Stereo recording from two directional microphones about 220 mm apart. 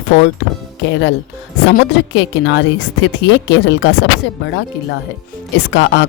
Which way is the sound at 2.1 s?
55° left (ahead or behind).